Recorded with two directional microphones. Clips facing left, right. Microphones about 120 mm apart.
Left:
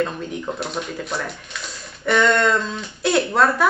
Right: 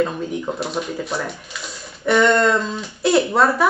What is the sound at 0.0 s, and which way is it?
Speech, 5° right (ahead or behind).